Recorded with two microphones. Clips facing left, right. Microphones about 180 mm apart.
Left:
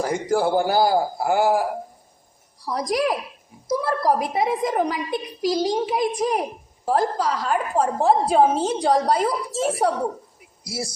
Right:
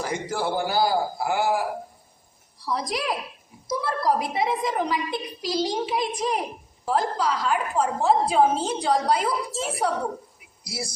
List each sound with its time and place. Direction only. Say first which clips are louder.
0.0 s a woman's voice: left 6 dB; 45° left (ahead or behind)